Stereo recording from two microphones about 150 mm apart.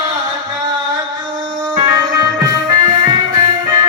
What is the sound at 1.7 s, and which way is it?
Music, 25° right (ahead or behind).